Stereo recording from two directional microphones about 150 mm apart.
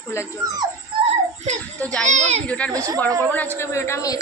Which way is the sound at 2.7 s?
25° right (ahead or behind).